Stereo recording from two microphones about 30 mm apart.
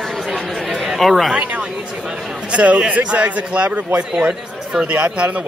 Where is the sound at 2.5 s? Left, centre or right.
Right.